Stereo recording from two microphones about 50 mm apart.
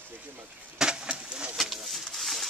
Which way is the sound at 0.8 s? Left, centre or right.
Centre.